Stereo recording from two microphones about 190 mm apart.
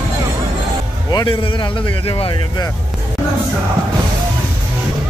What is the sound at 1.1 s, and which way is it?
A man's voice, 20° left (ahead or behind).